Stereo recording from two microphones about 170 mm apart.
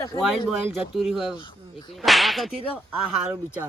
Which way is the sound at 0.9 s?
Centre (ahead or behind).